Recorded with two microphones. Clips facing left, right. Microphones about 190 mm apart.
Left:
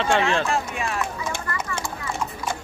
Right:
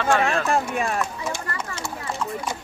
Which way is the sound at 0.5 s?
50° right (ahead or behind).